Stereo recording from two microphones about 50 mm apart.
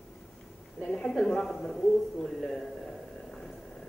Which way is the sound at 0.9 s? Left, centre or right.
Centre.